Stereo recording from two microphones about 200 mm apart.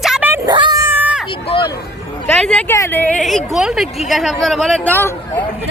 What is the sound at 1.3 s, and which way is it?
Vehicle, 25° left (ahead or behind).